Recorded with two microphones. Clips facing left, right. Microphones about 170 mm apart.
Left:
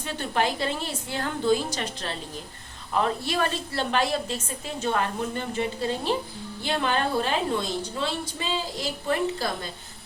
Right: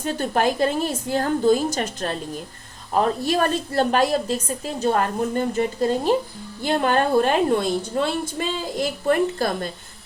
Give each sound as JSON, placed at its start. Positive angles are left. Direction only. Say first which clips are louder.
{"t": 0.0, "sound": "a woman's voice", "louder": "right 5 dB", "side_deg": -45}